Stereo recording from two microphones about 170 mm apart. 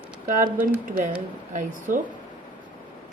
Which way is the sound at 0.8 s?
50° right (ahead or behind).